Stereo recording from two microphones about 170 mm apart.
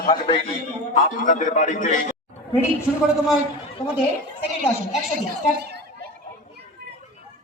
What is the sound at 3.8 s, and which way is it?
Speech, 25° left (ahead or behind).